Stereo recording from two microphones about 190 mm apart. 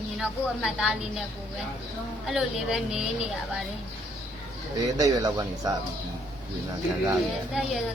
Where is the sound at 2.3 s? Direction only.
Centre (ahead or behind).